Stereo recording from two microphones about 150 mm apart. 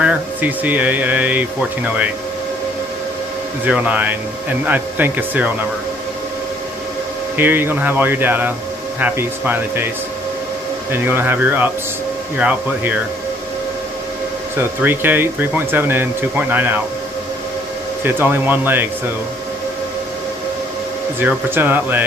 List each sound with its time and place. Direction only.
0.0 s speech: 10° right (ahead or behind)
3.6 s speech: 10° right (ahead or behind)
7.3 s speech: 15° right (ahead or behind)
10.9 s speech: 15° right (ahead or behind)
14.6 s speech: 15° right (ahead or behind)
18.0 s speech: 15° right (ahead or behind)
21.2 s speech: 15° right (ahead or behind)